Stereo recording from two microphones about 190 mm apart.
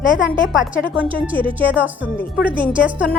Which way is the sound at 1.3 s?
25° right (ahead or behind).